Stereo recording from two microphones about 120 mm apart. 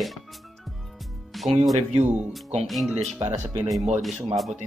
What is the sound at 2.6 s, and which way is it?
Speech, centre (ahead or behind).